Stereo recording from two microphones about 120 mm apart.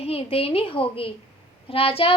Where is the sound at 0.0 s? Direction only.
55° left (ahead or behind).